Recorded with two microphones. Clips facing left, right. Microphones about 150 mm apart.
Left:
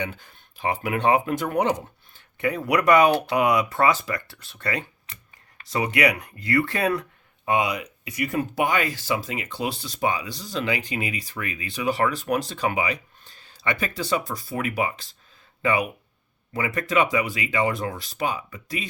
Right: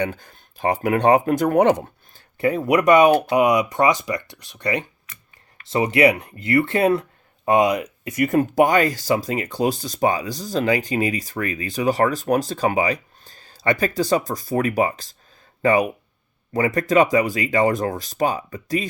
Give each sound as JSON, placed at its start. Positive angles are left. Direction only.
{"t": 0.0, "sound": "speech", "side_deg": -45}
{"t": 2.1, "sound": "speech", "side_deg": -30}
{"t": 5.1, "sound": "a sound", "side_deg": 30}
{"t": 5.7, "sound": "speech", "side_deg": -30}
{"t": 7.4, "sound": "speech", "side_deg": -45}